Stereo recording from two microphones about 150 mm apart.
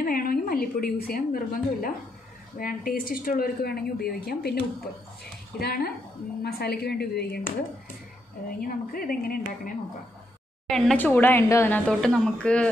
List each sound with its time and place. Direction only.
0.0 s a woman's voice: 70° left (ahead or behind); by 7.5 s 90° left
8.5 s speech: 75° left (ahead or behind)
10.7 s speech: 5° left (ahead or behind)
11.1 s a woman's voice: 15° left (ahead or behind)
11.9 s speech: 5° left (ahead or behind)